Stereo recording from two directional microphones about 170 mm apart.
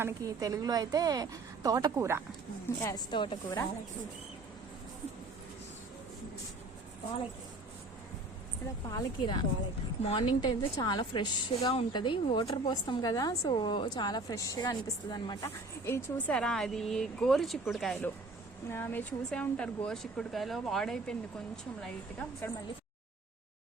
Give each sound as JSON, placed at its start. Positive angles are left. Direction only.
{"t": 0.0, "sound": "a woman's voice", "side_deg": -20}
{"t": 2.8, "sound": "a woman's voice", "side_deg": 25}
{"t": 8.9, "sound": "a woman's voice", "side_deg": 25}
{"t": 10.0, "sound": "a woman's voice", "side_deg": 40}
{"t": 10.2, "sound": "a woman's voice", "side_deg": 25}